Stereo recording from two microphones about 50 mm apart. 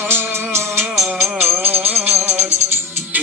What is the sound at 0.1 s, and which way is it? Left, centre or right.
Music, right.